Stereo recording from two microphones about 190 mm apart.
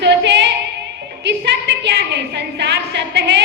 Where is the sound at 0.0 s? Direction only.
65° right (ahead or behind).